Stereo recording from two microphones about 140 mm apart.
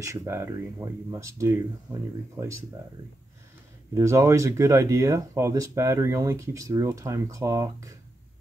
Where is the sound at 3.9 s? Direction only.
20° right (ahead or behind).